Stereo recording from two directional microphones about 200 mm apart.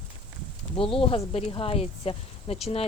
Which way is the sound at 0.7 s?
25° left (ahead or behind).